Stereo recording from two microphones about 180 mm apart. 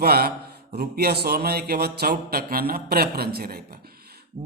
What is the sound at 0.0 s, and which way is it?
Mantra, 60° right (ahead or behind).